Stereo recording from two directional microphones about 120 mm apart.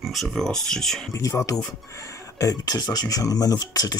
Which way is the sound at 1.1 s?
30° left (ahead or behind).